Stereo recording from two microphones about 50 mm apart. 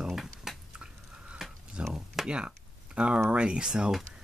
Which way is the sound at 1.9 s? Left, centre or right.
Centre.